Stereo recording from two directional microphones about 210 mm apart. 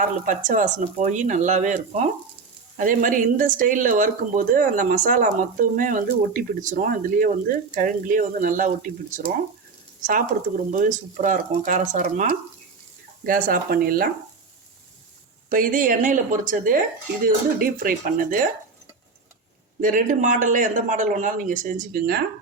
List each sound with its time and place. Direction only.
0.3 s speech: 35° right (ahead or behind)
10.0 s speech: 40° right (ahead or behind)
15.4 s speech: 40° right (ahead or behind)
19.8 s speech: 40° right (ahead or behind)